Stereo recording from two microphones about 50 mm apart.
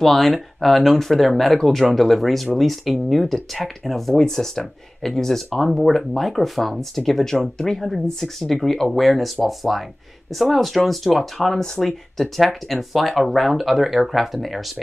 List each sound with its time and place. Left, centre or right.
0.0 s speech: centre